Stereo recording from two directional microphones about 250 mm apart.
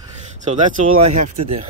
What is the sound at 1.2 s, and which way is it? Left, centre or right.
Speech, right.